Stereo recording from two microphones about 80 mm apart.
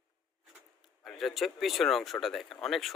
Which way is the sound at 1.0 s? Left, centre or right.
Centre.